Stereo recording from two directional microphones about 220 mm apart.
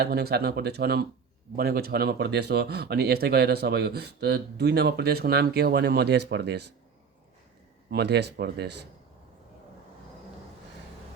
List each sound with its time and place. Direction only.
0.0 s speech: 45° right (ahead or behind)
7.9 s speech: 50° right (ahead or behind)